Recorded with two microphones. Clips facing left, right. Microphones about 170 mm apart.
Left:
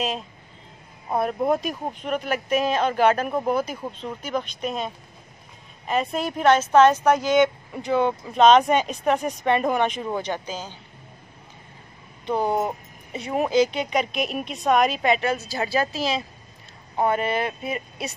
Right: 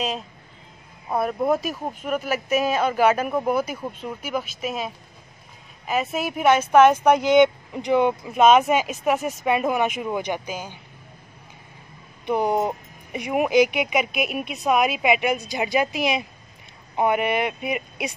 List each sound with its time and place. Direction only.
1.2 s speech: 5° right (ahead or behind)
12.3 s speech: 15° right (ahead or behind)